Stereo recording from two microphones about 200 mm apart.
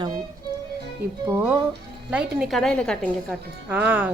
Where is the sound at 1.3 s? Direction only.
10° right (ahead or behind); by 3.0 s 5° left (ahead or behind).